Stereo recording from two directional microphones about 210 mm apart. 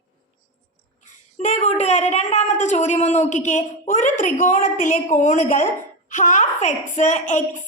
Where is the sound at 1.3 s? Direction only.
35° left (ahead or behind).